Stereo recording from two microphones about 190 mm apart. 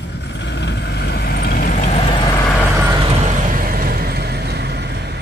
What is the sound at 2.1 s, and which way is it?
Vehicle, 20° left (ahead or behind).